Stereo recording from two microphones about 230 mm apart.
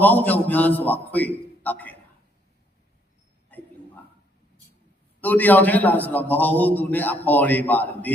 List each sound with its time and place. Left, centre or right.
0.0 s a man's voice: centre
5.2 s a man's voice: centre